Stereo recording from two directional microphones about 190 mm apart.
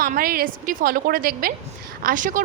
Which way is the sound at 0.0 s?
45° right (ahead or behind).